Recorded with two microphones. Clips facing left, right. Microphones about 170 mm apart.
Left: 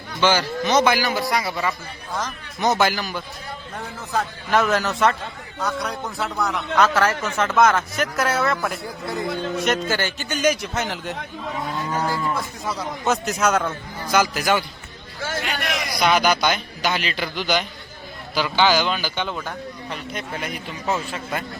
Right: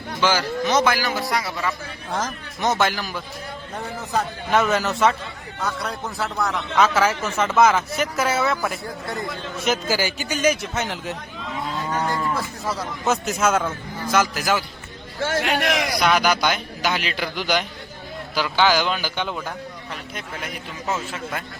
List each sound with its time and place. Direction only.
0.2 s a man's voice: 5° right (ahead or behind)
4.5 s a man's voice: centre (ahead or behind)
15.4 s a man's voice: 65° right (ahead or behind)
16.0 s a man's voice: 5° right (ahead or behind)